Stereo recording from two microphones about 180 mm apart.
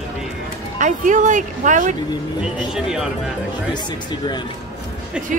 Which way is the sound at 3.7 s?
25° left (ahead or behind).